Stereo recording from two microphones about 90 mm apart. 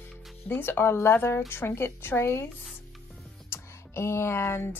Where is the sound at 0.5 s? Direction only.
25° left (ahead or behind).